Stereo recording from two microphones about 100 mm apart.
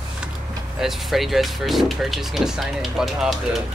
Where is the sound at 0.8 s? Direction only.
Centre (ahead or behind).